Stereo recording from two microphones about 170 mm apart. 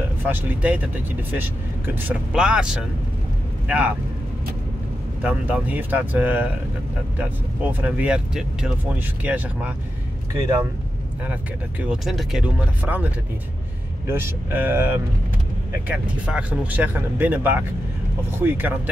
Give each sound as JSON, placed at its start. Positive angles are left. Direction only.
{"t": 0.2, "sound": "speech", "side_deg": -10}
{"t": 5.2, "sound": "speech", "side_deg": -10}
{"t": 11.8, "sound": "speech", "side_deg": -5}